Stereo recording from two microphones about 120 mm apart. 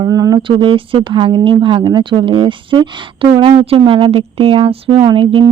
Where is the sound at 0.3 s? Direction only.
45° right (ahead or behind).